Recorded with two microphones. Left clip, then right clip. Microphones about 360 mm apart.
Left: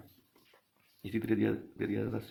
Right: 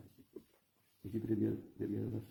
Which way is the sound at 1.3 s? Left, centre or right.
Centre.